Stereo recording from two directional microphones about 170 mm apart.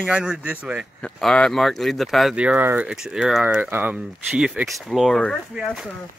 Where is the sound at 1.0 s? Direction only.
5° left (ahead or behind).